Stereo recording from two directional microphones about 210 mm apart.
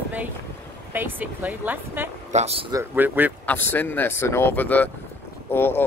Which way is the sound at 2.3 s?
30° right (ahead or behind).